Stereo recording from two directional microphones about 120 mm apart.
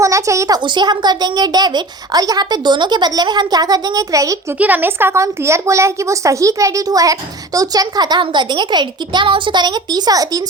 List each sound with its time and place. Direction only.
0.0 s a woman's voice: 25° right (ahead or behind)
0.6 s a child's voice: 40° right (ahead or behind)
4.5 s a woman's voice: 15° right (ahead or behind); by 10.4 s 30° right (ahead or behind)